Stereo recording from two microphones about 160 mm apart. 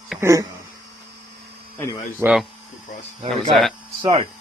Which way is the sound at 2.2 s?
15° right (ahead or behind).